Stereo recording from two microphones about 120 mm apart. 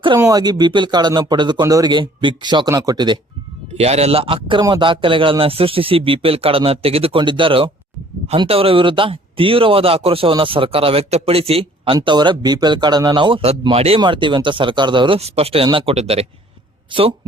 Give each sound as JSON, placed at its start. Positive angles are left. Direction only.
{"t": 0.2, "sound": "speech", "side_deg": -30}
{"t": 3.8, "sound": "speech", "side_deg": -60}
{"t": 11.9, "sound": "speech", "side_deg": -40}
{"t": 14.0, "sound": "speech", "side_deg": -40}
{"t": 15.2, "sound": "speech", "side_deg": -55}
{"t": 16.0, "sound": "speech", "side_deg": -60}